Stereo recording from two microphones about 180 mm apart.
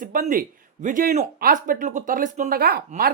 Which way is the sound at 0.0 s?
50° right (ahead or behind).